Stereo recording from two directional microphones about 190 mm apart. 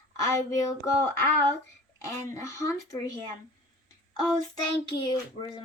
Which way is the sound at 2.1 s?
15° left (ahead or behind).